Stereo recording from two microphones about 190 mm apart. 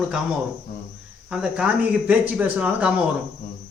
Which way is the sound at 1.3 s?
5° right (ahead or behind).